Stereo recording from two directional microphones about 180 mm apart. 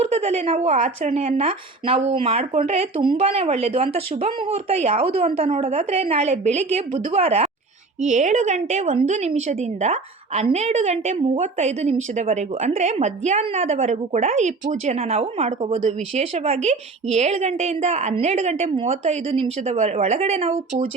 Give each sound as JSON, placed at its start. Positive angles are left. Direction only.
{"t": 0.1, "sound": "a woman's voice", "side_deg": -35}